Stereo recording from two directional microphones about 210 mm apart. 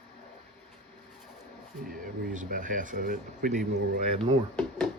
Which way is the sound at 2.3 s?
40° right (ahead or behind).